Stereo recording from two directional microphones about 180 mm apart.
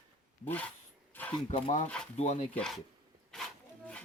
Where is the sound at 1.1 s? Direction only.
10° left (ahead or behind).